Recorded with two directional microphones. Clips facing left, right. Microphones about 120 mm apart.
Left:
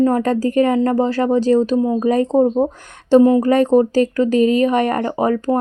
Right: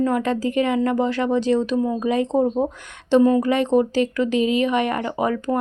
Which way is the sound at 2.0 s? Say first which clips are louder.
Left 6 dB; 40° left (ahead or behind).